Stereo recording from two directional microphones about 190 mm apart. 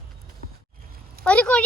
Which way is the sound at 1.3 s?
5° left (ahead or behind).